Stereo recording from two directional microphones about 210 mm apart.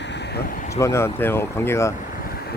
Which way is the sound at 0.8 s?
15° left (ahead or behind).